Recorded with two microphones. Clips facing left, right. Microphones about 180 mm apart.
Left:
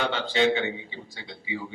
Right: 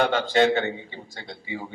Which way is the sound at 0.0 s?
45° right (ahead or behind).